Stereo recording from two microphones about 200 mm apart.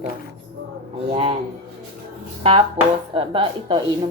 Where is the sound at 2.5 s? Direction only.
25° right (ahead or behind).